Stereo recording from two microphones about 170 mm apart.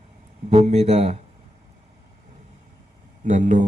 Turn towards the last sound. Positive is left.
turn(degrees=-50)  # may be behind; listen again after turning